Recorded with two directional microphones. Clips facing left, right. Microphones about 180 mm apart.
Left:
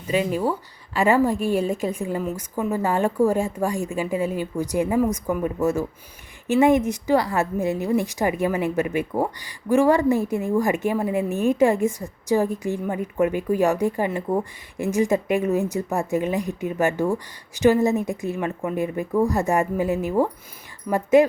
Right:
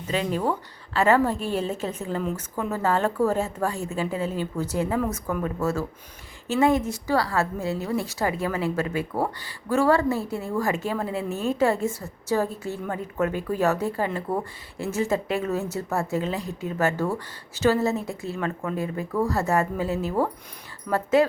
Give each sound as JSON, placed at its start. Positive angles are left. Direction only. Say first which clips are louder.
{"t": 0.1, "sound": "a woman's voice", "louder": "left 3 dB", "side_deg": 10}